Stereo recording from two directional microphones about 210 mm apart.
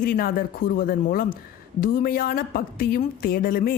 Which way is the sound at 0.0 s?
45° left (ahead or behind).